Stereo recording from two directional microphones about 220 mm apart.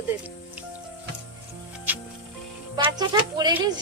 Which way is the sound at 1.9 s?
10° right (ahead or behind).